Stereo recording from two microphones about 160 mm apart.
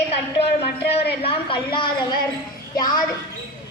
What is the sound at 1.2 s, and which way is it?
A woman's voice, 35° left (ahead or behind).